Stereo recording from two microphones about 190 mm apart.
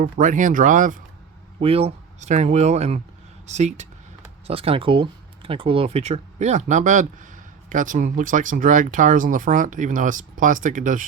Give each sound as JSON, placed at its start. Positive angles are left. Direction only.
{"t": 0.0, "sound": "speech", "side_deg": -45}
{"t": 1.5, "sound": "speech", "side_deg": -30}